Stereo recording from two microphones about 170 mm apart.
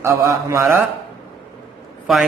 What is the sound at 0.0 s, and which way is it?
Speech, 15° right (ahead or behind).